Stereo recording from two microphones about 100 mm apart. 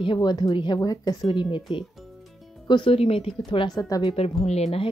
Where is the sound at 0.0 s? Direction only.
50° left (ahead or behind).